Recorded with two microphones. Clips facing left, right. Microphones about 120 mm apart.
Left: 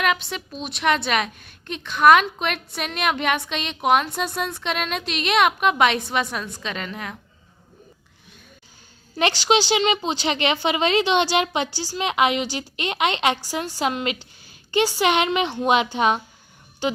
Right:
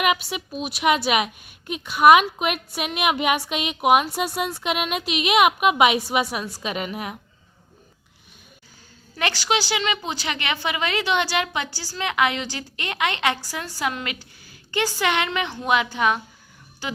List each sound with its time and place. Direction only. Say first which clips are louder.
0.0 s a woman's voice: right 1 dB; 10° right (ahead or behind)
9.1 s a woman's voice: left 4 dB; 25° left (ahead or behind)